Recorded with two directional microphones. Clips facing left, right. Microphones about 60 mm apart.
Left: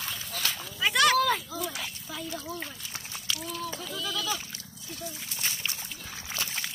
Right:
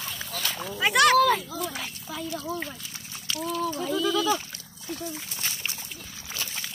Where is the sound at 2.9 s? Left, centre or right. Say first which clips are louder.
Left 1 dB; centre.